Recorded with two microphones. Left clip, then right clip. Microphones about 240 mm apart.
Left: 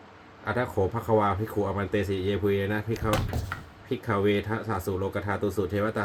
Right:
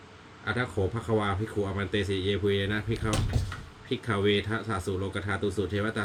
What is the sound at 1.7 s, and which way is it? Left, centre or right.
Speech, centre.